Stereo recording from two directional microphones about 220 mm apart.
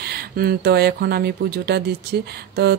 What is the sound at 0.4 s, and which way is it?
Speech, 45° right (ahead or behind).